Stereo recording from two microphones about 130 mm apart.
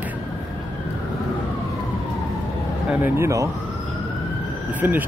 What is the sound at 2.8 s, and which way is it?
Speech, 20° right (ahead or behind).